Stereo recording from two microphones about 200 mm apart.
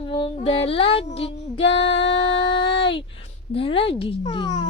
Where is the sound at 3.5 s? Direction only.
25° left (ahead or behind).